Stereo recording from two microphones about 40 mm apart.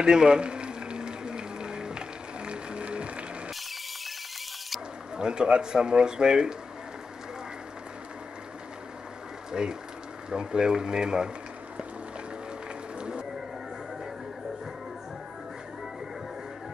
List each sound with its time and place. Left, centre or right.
0.0 s a sound: centre
5.1 s speech: right
9.5 s speech: centre